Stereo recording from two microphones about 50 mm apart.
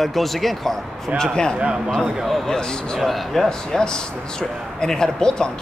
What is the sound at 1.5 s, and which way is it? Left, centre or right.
Speech, centre.